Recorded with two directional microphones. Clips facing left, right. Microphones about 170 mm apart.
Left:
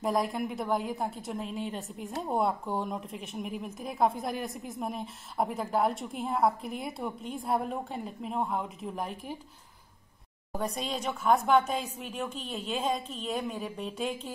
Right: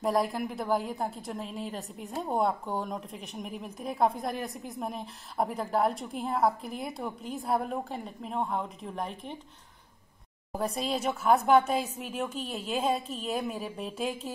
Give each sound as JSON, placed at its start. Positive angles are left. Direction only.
{"t": 0.0, "sound": "a woman's voice", "side_deg": 0}
{"t": 10.6, "sound": "a woman's voice", "side_deg": 0}